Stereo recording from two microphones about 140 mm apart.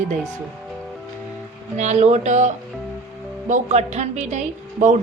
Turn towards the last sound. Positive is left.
turn(degrees=-55)  # may be behind; listen again after turning